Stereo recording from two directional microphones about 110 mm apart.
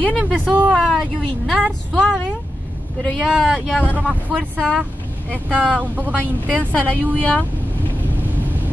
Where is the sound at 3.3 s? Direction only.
Centre (ahead or behind).